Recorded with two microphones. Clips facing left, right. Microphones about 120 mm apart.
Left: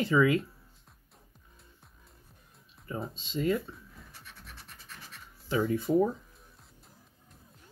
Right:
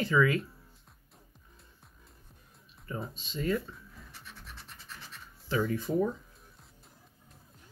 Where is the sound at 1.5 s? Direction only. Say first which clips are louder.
Left 1 dB; centre (ahead or behind).